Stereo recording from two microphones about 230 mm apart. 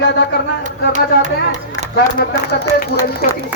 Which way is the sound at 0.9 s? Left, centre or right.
Right.